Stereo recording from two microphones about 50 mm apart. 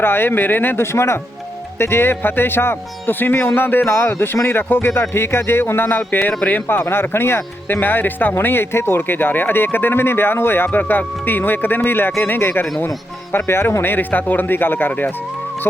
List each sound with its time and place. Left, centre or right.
0.0 s speech: left
0.9 s speech: left
1.8 s speech: left
6.8 s speech: left
10.7 s speech: left